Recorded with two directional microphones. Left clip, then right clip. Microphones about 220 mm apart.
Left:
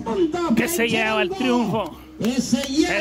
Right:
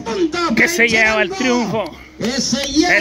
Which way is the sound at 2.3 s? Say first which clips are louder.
Right 4 dB; 35° right (ahead or behind).